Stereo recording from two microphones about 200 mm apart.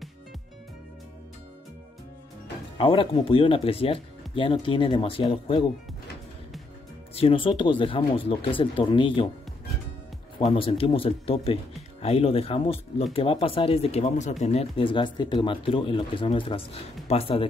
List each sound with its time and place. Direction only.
2.8 s speech: 25° left (ahead or behind)
7.2 s speech: 25° left (ahead or behind)
10.4 s speech: 25° left (ahead or behind)